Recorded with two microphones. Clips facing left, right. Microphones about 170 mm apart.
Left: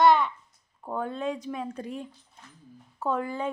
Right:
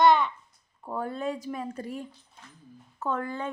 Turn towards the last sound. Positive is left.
turn(degrees=10)  # may be behind; listen again after turning